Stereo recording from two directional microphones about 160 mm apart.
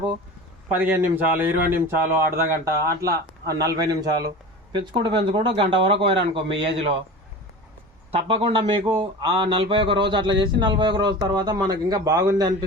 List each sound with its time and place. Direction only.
0.8 s a man's voice: 10° right (ahead or behind); by 7.0 s 35° right (ahead or behind)
8.1 s speech: 35° right (ahead or behind)